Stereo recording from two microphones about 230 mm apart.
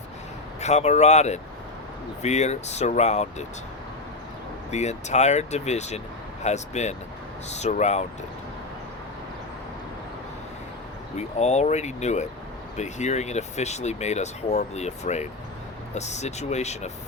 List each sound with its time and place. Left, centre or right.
0.6 s speech: left
4.7 s speech: left
11.2 s speech: left